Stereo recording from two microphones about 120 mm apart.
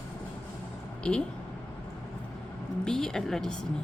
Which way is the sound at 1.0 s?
10° left (ahead or behind).